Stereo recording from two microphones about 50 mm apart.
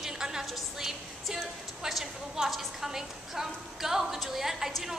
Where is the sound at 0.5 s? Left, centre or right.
Centre.